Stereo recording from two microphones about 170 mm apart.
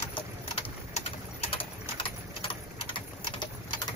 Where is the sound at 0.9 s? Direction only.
35° left (ahead or behind).